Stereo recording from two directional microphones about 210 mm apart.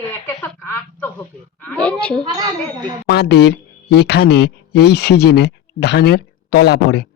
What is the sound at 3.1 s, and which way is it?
Speech, 50° left (ahead or behind).